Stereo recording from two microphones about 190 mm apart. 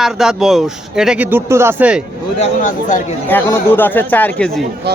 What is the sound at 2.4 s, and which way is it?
Speech, 40° left (ahead or behind).